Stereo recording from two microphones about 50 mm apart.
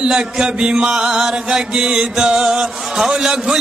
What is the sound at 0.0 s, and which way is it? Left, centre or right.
Mantra, centre.